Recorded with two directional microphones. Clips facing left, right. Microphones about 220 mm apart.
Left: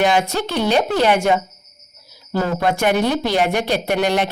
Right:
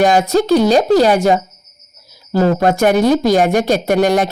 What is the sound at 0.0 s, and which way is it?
A woman's voice, 40° right (ahead or behind).